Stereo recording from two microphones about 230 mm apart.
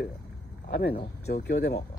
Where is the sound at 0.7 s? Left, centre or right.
Left.